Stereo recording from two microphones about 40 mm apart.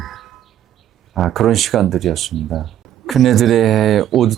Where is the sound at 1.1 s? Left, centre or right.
Centre.